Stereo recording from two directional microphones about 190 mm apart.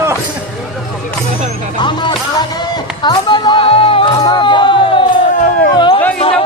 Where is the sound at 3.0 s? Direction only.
25° left (ahead or behind).